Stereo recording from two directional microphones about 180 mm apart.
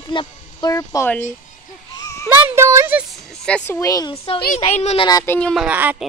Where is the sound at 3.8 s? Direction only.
20° left (ahead or behind).